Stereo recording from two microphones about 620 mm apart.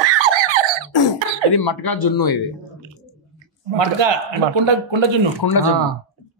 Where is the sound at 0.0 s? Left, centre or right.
Right.